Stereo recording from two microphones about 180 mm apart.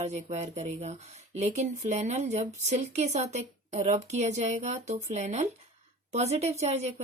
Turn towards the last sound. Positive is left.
turn(degrees=-35)  # may be behind; listen again after turning